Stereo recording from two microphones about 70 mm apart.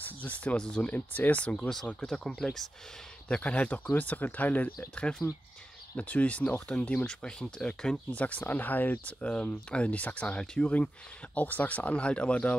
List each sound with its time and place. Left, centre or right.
0.0 s speech: left; by 2.6 s centre
3.3 s speech: centre
5.2 s speech: left
5.9 s speech: centre